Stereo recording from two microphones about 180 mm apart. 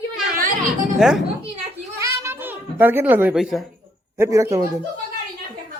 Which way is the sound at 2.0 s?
10° right (ahead or behind).